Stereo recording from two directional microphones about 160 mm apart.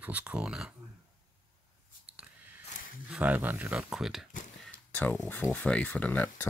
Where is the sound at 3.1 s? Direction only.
10° right (ahead or behind).